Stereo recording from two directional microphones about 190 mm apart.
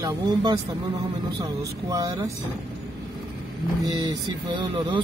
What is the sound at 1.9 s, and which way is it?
Speech, 15° right (ahead or behind).